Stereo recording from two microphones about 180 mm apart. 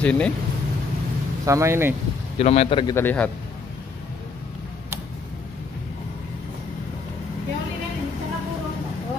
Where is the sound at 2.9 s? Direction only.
10° left (ahead or behind).